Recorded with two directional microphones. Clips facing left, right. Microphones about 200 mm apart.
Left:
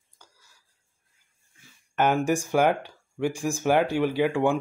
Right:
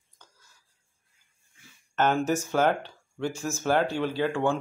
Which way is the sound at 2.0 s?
10° left (ahead or behind).